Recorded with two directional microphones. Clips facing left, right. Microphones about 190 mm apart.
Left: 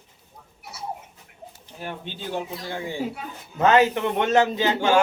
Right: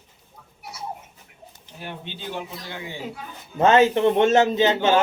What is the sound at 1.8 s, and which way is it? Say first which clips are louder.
Speech: left 2 dB; 45° left (ahead or behind).